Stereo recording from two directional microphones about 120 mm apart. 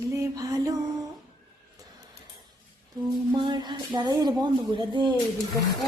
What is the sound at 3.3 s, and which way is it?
Speech, 40° right (ahead or behind).